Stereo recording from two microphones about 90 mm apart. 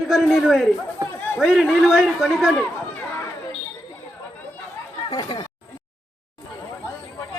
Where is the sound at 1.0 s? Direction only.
45° right (ahead or behind).